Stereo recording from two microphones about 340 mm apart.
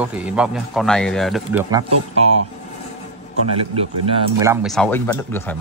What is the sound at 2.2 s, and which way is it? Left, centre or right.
Speech, centre.